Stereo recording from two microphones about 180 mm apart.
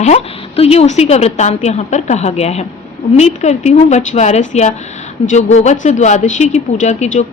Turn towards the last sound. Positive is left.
turn(degrees=40)  # may be behind; listen again after turning